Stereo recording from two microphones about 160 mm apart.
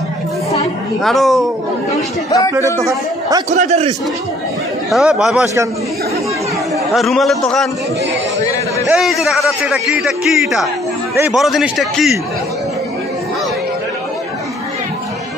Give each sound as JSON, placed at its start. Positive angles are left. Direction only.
{"t": 1.0, "sound": "a man's voice", "side_deg": 0}
{"t": 2.0, "sound": "speech", "side_deg": 20}
{"t": 2.8, "sound": "a man's voice", "side_deg": -20}
{"t": 3.4, "sound": "a man's voice", "side_deg": -45}
{"t": 4.9, "sound": "a man's voice", "side_deg": -5}
{"t": 5.4, "sound": "a man's voice", "side_deg": -20}
{"t": 6.9, "sound": "a man's voice", "side_deg": 0}
{"t": 8.9, "sound": "a man's voice", "side_deg": 0}